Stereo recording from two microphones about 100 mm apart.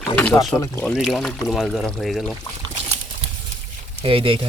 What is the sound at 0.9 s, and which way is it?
Speech, centre (ahead or behind).